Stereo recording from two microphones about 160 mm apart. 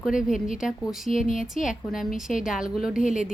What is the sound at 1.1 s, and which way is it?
Speech, 40° right (ahead or behind).